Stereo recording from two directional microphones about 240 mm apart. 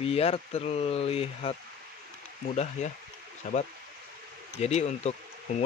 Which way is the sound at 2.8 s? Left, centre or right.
Left.